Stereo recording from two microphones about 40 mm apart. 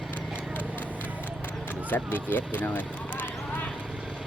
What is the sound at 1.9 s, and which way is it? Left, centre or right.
Speech, left.